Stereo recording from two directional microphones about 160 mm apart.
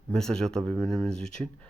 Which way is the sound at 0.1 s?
5° left (ahead or behind).